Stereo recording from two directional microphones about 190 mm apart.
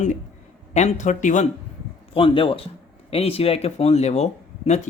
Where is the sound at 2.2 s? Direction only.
30° left (ahead or behind).